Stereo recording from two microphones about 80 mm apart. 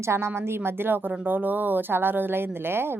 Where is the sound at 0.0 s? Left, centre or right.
Right.